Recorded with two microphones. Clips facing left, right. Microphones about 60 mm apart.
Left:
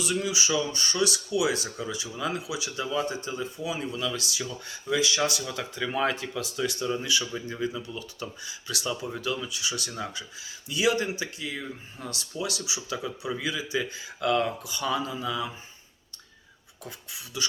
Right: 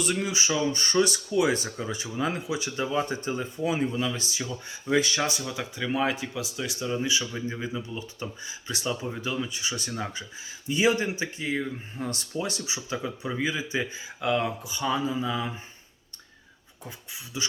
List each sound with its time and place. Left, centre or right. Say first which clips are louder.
0.0 s speech: right 1 dB; right
4.9 s speech: right 2 dB; right
5.4 s speech: even; centre
7.0 s speech: right 1 dB; right
16.8 s speech: even; right